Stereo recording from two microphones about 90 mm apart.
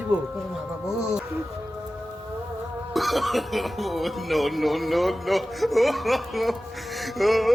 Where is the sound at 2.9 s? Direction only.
Centre (ahead or behind).